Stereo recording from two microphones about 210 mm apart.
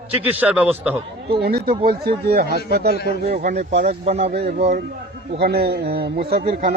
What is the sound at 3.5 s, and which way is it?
Speech, 30° right (ahead or behind).